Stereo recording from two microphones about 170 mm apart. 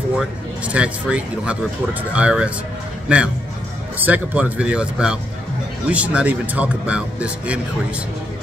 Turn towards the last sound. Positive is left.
turn(degrees=-5)  # may be behind; listen again after turning